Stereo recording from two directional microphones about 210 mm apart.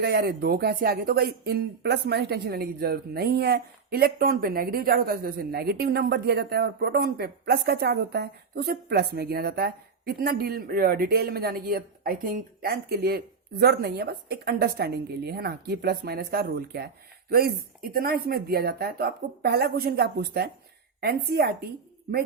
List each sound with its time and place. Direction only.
0.0 s speech: 50° right (ahead or behind)